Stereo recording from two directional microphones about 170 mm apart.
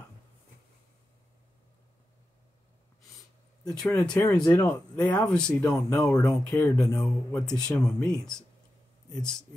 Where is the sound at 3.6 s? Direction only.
5° left (ahead or behind).